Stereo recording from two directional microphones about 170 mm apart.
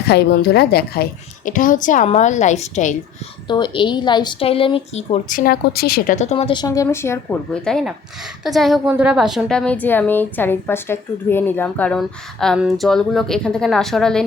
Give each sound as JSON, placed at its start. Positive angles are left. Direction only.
{"t": 0.1, "sound": "speech", "side_deg": 75}
{"t": 1.5, "sound": "a woman's voice", "side_deg": 50}
{"t": 3.4, "sound": "speech", "side_deg": 25}
{"t": 5.4, "sound": "a woman's voice", "side_deg": 65}
{"t": 6.1, "sound": "a woman's voice", "side_deg": 35}